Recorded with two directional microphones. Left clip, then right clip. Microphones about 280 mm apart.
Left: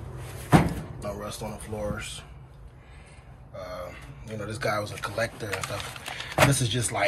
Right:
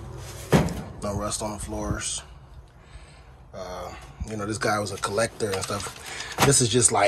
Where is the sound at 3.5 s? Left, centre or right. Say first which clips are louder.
Right 2 dB; centre.